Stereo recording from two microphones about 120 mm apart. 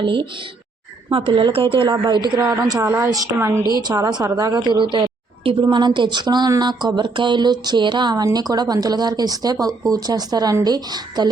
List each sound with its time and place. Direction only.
0.0 s a woman's voice: 45° right (ahead or behind); by 3.5 s 20° right (ahead or behind)
3.8 s speech: 35° right (ahead or behind)
5.6 s speech: 40° right (ahead or behind)